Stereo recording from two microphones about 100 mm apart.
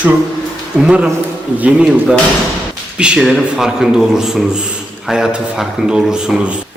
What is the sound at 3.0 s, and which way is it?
Speech, 10° right (ahead or behind).